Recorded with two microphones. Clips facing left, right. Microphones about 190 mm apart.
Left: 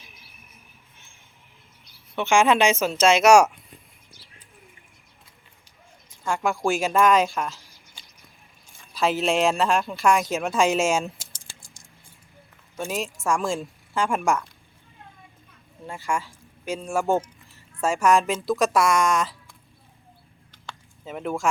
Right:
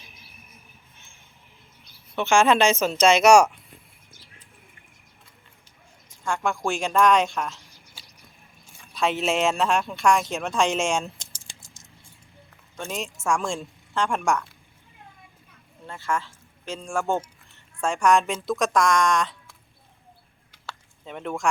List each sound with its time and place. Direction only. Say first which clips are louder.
2.1 s a woman's voice: even; 15° left (ahead or behind)
6.2 s speech: left 2 dB; 5° left (ahead or behind)
11.3 s a sound: even; 10° right (ahead or behind)
11.6 s a sound: even; 20° right (ahead or behind)
12.7 s speech: left 3 dB; 5° left (ahead or behind)
15.9 s speech: even; 10° left (ahead or behind)
21.0 s speech: left 3 dB; 5° left (ahead or behind)